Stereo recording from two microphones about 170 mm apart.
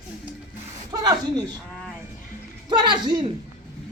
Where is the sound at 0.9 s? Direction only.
20° right (ahead or behind).